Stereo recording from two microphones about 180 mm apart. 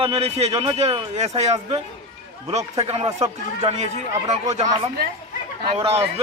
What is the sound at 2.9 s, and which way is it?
A man's voice, 35° right (ahead or behind).